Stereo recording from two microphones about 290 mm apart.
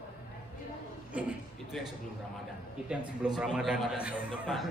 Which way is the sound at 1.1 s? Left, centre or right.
Centre.